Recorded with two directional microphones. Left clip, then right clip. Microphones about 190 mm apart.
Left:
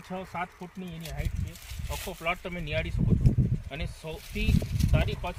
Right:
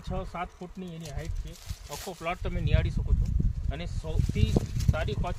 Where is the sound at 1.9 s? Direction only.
Centre (ahead or behind).